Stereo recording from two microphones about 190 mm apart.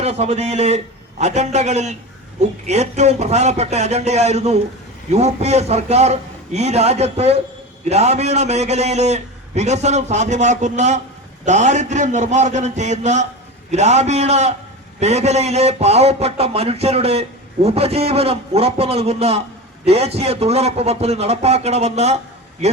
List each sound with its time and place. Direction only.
0.0 s speech: 35° right (ahead or behind)